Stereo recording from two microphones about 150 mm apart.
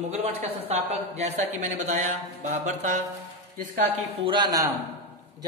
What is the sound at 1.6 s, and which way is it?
A man's voice, 55° right (ahead or behind).